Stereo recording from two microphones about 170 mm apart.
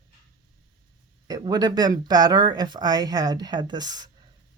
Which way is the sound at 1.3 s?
25° right (ahead or behind).